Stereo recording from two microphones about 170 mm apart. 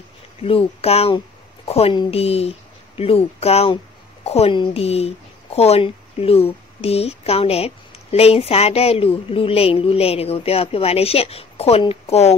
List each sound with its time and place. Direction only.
0.4 s a woman's voice: 35° left (ahead or behind)